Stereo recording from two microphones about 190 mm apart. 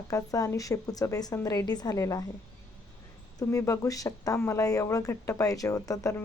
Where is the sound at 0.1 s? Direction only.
20° left (ahead or behind).